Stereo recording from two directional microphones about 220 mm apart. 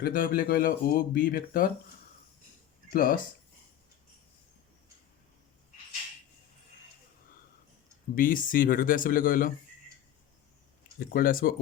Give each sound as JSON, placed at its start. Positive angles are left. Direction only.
{"t": 0.0, "sound": "speech", "side_deg": 40}
{"t": 2.9, "sound": "speech", "side_deg": 40}
{"t": 8.1, "sound": "speech", "side_deg": 40}
{"t": 11.1, "sound": "speech", "side_deg": 40}